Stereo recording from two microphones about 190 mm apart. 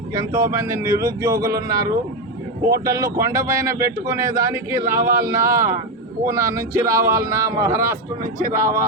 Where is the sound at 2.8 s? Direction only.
15° right (ahead or behind).